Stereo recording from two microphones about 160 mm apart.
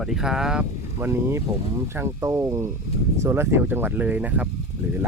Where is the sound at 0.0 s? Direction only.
5° right (ahead or behind).